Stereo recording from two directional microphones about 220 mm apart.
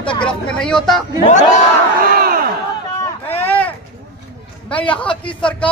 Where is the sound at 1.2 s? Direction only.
35° left (ahead or behind).